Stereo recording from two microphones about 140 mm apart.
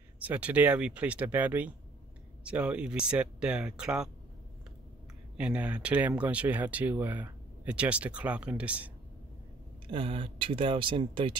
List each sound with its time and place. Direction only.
0.2 s speech: 10° right (ahead or behind)
5.4 s speech: 10° right (ahead or behind)
9.8 s speech: 40° right (ahead or behind)